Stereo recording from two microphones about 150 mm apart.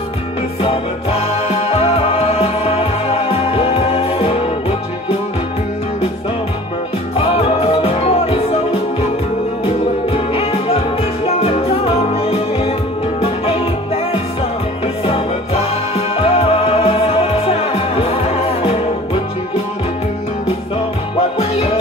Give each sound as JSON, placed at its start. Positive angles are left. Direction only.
{"t": 1.5, "sound": "music", "side_deg": 40}
{"t": 7.2, "sound": "music", "side_deg": 40}
{"t": 10.1, "sound": "music", "side_deg": 40}
{"t": 16.2, "sound": "music", "side_deg": 40}